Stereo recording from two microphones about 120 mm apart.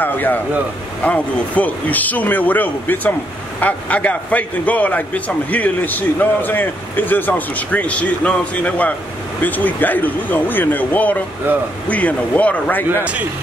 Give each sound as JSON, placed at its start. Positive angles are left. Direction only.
{"t": 0.0, "sound": "a man's voice", "side_deg": 15}
{"t": 12.9, "sound": "speech", "side_deg": -10}